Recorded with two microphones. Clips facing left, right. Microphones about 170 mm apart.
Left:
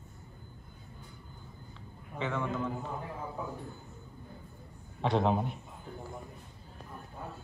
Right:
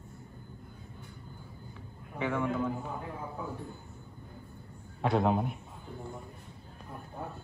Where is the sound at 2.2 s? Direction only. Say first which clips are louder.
Right 3 dB; 10° right (ahead or behind).